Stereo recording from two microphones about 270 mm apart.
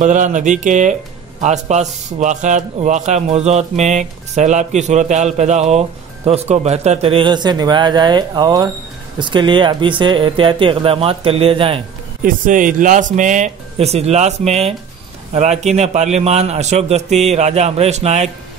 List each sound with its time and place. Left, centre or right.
0.0 s a man's voice: right
12.2 s a man's voice: right